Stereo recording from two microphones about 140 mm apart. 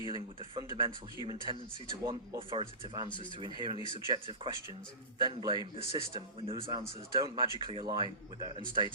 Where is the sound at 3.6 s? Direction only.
35° right (ahead or behind).